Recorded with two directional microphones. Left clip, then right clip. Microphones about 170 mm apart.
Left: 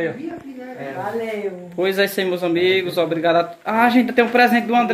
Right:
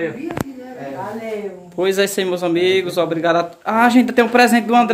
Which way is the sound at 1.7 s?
10° right (ahead or behind).